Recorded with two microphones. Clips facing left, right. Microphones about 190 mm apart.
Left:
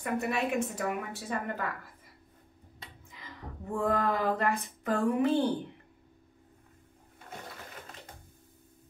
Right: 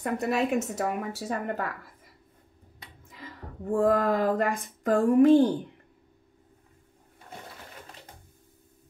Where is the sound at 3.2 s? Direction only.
50° right (ahead or behind).